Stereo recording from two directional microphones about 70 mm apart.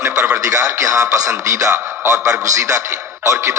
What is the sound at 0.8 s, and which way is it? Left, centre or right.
Speech, right.